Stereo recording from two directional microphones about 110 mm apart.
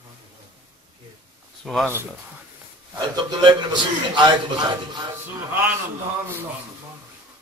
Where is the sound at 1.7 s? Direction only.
Centre (ahead or behind).